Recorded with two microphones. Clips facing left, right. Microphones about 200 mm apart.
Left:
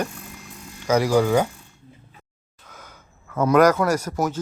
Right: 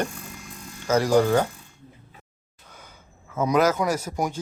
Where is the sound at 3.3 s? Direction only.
65° left (ahead or behind).